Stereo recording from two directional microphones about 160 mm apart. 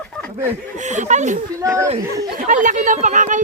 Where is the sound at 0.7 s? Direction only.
50° right (ahead or behind).